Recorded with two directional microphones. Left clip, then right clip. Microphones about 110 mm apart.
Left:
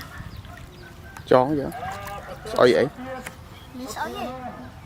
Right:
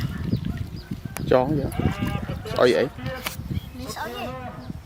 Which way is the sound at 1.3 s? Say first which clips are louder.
Left 2 dB; 5° left (ahead or behind).